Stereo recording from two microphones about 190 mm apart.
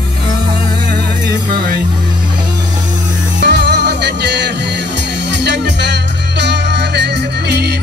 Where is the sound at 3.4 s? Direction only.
65° right (ahead or behind).